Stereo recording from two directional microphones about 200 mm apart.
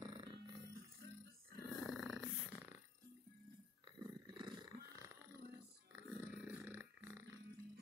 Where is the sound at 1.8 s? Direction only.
Centre (ahead or behind).